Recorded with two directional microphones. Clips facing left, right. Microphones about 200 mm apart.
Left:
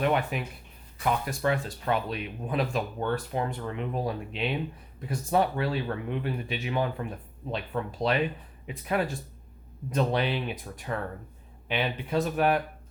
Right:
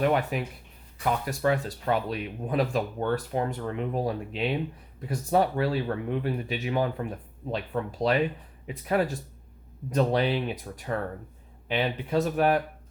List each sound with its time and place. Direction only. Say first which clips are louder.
0.0 s speech: right 2 dB; 40° right (ahead or behind)